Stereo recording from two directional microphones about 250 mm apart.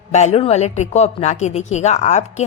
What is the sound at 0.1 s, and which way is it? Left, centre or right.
Speech, left.